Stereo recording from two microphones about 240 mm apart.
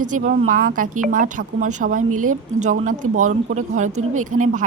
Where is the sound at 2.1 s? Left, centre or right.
Right.